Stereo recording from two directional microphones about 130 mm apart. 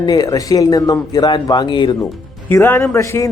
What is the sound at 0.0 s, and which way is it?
A woman's voice, 30° left (ahead or behind).